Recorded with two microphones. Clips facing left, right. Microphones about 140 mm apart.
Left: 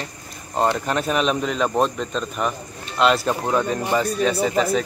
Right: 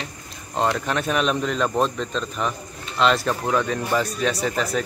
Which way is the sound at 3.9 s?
Centre (ahead or behind).